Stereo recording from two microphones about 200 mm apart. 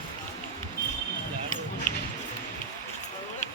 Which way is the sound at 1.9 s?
40° left (ahead or behind).